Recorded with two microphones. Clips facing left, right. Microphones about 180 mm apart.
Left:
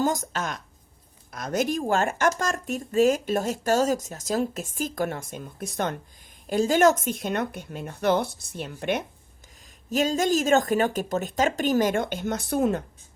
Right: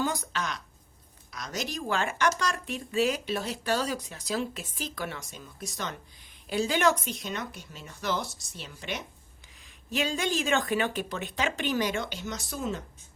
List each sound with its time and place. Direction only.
0.0 s a woman's voice: 45° left (ahead or behind)
6.5 s speech: 45° left (ahead or behind)
9.9 s speech: 40° left (ahead or behind); by 12.8 s 60° left (ahead or behind)